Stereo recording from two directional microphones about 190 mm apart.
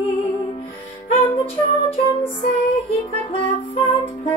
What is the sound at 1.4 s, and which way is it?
Music, 30° left (ahead or behind).